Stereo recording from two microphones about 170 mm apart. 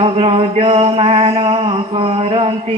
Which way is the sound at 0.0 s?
35° right (ahead or behind).